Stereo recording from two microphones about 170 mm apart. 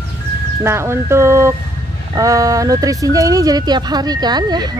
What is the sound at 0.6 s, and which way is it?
Speech, 15° right (ahead or behind).